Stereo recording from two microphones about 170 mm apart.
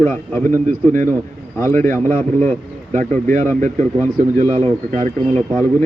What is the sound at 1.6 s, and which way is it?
Speech, 15° left (ahead or behind).